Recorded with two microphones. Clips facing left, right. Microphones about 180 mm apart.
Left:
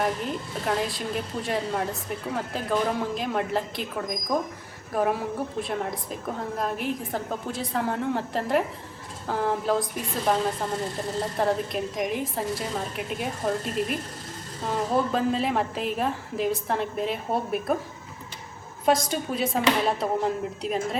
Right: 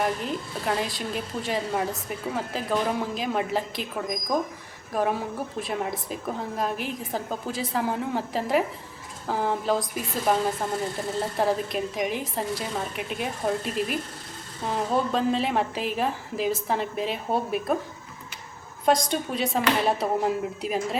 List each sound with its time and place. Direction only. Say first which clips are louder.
0.0 s a woman's voice: even; centre (ahead or behind)
5.5 s a woman's voice: even; centre (ahead or behind)
18.9 s a woman's voice: even; 5° left (ahead or behind)